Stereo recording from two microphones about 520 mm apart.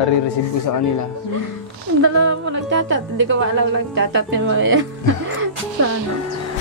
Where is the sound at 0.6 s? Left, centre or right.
Left.